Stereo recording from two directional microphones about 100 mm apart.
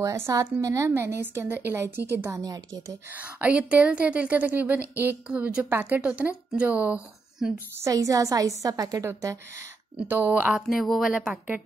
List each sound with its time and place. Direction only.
0.0 s a woman's voice: 30° right (ahead or behind)
2.3 s a woman's voice: 40° right (ahead or behind)
3.2 s a woman's voice: 15° right (ahead or behind)
7.8 s a woman's voice: 35° right (ahead or behind)
10.0 s a woman's voice: 15° right (ahead or behind)
10.5 s a woman's voice: centre (ahead or behind)